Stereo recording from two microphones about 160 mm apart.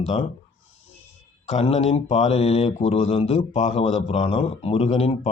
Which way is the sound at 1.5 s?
40° left (ahead or behind).